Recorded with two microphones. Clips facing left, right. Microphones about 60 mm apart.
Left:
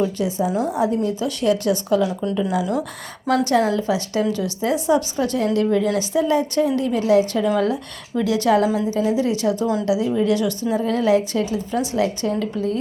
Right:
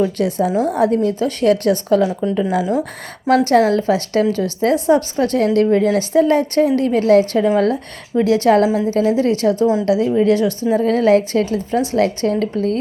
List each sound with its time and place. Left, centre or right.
0.0 s a woman's voice: right
1.4 s a woman's voice: right
2.3 s a woman's voice: right
3.2 s a woman's voice: right
8.2 s a woman's voice: right
10.2 s a woman's voice: right
10.8 s a woman's voice: right